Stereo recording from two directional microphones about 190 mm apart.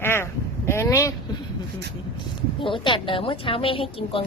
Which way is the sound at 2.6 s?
25° left (ahead or behind).